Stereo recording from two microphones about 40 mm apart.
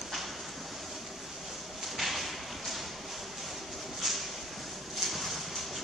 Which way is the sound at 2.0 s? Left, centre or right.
Centre.